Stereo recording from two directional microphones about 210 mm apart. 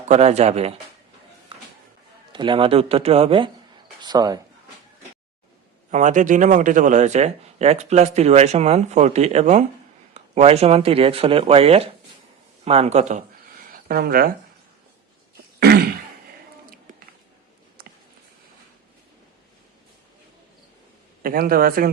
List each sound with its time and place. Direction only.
0.1 s a man's voice: 30° right (ahead or behind)
2.3 s speech: 20° right (ahead or behind)
5.9 s a man's voice: 35° right (ahead or behind)
15.6 s throat clearing: 45° right (ahead or behind)
21.2 s a man's voice: 45° right (ahead or behind)